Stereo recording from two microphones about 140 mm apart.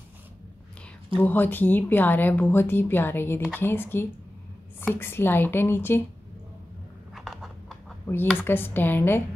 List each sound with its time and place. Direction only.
1.1 s speech: 10° left (ahead or behind)
7.2 s a sound: centre (ahead or behind)
8.4 s speech: 15° left (ahead or behind)